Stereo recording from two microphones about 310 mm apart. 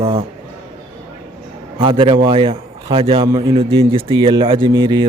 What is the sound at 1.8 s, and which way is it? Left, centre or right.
A man's voice, centre.